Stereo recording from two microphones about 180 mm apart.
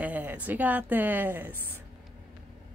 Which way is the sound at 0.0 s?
10° right (ahead or behind).